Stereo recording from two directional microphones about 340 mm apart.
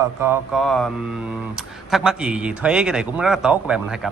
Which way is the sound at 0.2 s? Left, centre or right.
Centre.